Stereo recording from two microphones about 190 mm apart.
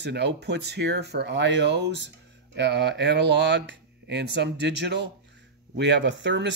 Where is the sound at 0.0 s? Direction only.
60° right (ahead or behind).